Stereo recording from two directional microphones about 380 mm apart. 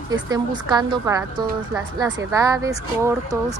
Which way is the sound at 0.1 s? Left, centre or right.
Centre.